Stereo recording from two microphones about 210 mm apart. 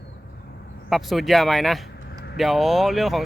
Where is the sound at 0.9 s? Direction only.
Centre (ahead or behind).